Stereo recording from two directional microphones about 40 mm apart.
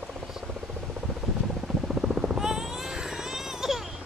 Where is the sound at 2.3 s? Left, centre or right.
Centre.